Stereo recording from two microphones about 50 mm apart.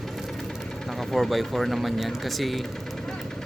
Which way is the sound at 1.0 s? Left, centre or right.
Centre.